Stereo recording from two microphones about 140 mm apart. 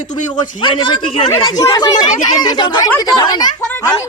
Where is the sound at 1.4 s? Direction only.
25° left (ahead or behind).